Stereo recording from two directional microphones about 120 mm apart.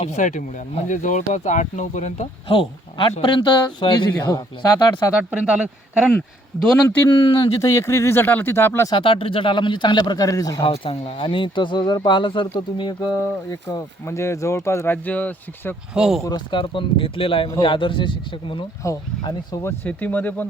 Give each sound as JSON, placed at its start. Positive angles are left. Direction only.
{"t": 0.0, "sound": "speech", "side_deg": 80}
{"t": 2.5, "sound": "speech", "side_deg": 45}
{"t": 5.3, "sound": "speech", "side_deg": -10}
{"t": 6.7, "sound": "speech", "side_deg": 15}
{"t": 7.1, "sound": "speech", "side_deg": 35}
{"t": 8.9, "sound": "speech", "side_deg": 45}
{"t": 10.6, "sound": "speech", "side_deg": 50}
{"t": 16.0, "sound": "speech", "side_deg": -5}
{"t": 16.2, "sound": "speech", "side_deg": 40}
{"t": 18.8, "sound": "speech", "side_deg": 25}
{"t": 19.6, "sound": "speech", "side_deg": 15}